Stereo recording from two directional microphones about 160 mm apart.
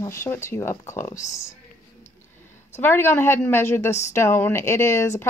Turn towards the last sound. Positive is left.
turn(degrees=15)  # may be behind; listen again after turning